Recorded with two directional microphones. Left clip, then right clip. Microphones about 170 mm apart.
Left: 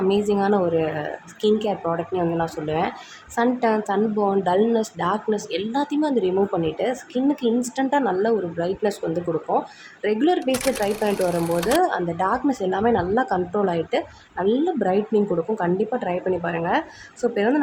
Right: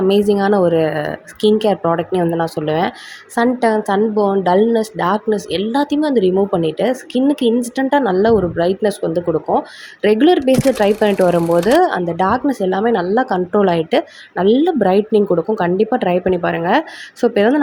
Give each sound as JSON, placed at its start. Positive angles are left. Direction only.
{"t": 0.1, "sound": "a woman's voice", "side_deg": -35}
{"t": 10.4, "sound": "speech", "side_deg": 0}
{"t": 11.8, "sound": "a woman's voice", "side_deg": -30}